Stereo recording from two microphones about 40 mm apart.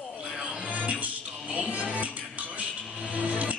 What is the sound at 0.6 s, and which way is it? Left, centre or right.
Music, right.